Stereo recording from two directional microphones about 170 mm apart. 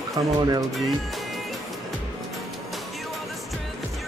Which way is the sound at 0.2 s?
25° right (ahead or behind).